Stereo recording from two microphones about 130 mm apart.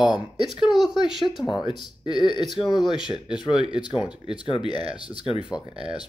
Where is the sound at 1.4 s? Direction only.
35° left (ahead or behind).